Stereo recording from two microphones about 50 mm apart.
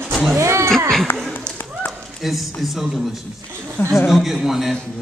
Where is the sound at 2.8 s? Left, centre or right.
Centre.